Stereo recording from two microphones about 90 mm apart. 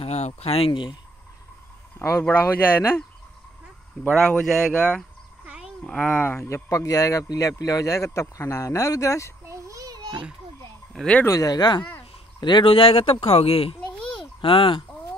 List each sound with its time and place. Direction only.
0.0 s speech: 85° left; by 0.9 s 65° left (ahead or behind)
2.4 s speech: 25° left (ahead or behind)
4.2 s speech: 5° left (ahead or behind)
6.2 s speech: 25° left (ahead or behind)
9.5 s a sound: 40° right (ahead or behind)
10.9 s a sound: 5° left (ahead or behind)
11.2 s speech: 40° left (ahead or behind); by 13.7 s 90° left
13.7 s babbling: 10° left (ahead or behind)
14.4 s speech: 85° left